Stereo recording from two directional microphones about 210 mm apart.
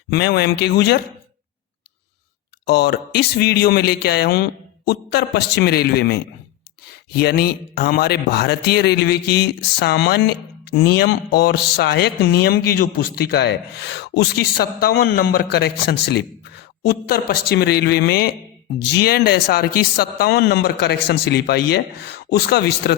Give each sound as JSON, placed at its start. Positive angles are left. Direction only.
{"t": 0.1, "sound": "a man's voice", "side_deg": 50}
{"t": 2.6, "sound": "a man's voice", "side_deg": 50}